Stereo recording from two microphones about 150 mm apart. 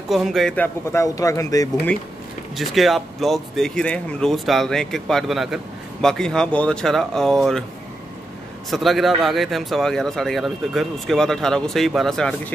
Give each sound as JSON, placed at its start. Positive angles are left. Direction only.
{"t": 0.1, "sound": "speech", "side_deg": 0}
{"t": 0.9, "sound": "speech", "side_deg": 20}
{"t": 2.5, "sound": "speech", "side_deg": 0}
{"t": 8.6, "sound": "speech", "side_deg": 0}